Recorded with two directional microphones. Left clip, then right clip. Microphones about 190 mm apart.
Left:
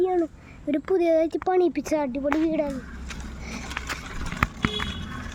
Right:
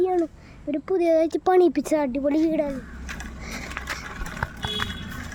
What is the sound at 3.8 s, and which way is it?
Horse, 40° left (ahead or behind).